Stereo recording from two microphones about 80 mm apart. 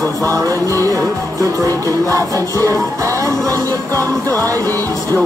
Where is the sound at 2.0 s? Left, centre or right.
Right.